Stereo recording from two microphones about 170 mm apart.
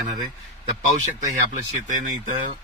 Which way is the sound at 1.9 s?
50° right (ahead or behind).